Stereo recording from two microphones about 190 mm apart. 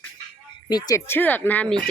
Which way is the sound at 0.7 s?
20° left (ahead or behind).